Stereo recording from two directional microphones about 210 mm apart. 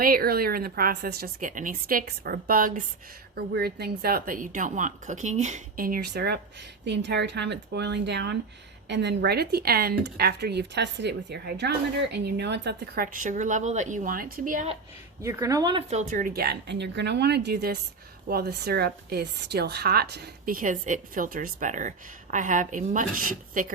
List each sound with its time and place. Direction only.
0.0 s a woman's voice: 45° right (ahead or behind)
15.2 s speech: 15° right (ahead or behind)
15.9 s a woman's voice: 35° right (ahead or behind)